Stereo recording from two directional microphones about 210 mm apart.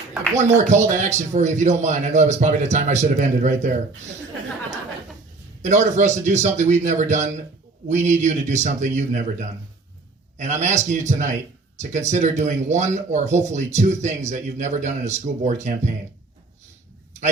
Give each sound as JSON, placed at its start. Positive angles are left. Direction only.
{"t": 0.3, "sound": "speech", "side_deg": -35}
{"t": 5.6, "sound": "speech", "side_deg": -35}
{"t": 10.3, "sound": "speech", "side_deg": -35}